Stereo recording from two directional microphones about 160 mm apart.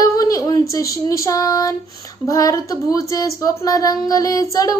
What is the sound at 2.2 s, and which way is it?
Speech, 20° left (ahead or behind).